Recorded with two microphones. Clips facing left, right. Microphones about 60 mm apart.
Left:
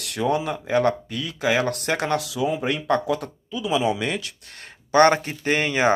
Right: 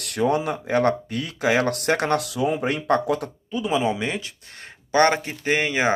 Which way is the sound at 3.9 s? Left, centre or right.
Right.